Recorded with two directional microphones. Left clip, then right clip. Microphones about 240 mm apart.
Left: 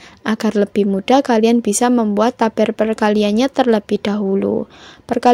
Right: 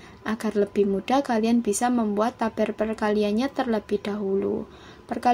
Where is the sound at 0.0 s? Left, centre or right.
Left.